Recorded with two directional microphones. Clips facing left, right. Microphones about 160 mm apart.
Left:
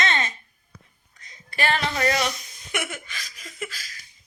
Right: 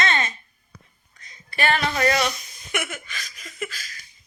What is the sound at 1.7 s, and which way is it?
Speech, 20° left (ahead or behind).